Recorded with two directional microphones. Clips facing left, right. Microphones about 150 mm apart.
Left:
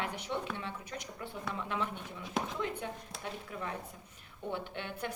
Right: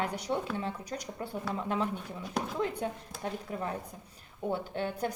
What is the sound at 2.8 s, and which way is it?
Speech, 40° right (ahead or behind).